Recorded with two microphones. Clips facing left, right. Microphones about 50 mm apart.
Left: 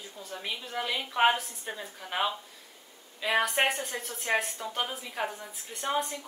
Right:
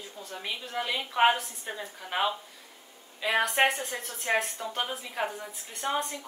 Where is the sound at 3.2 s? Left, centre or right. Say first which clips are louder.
Right 1 dB; centre.